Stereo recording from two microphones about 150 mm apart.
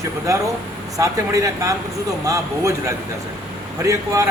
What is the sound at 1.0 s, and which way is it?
Speech, 20° right (ahead or behind).